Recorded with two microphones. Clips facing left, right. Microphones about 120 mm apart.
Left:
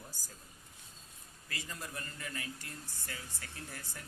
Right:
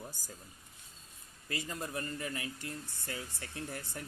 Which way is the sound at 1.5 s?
35° right (ahead or behind).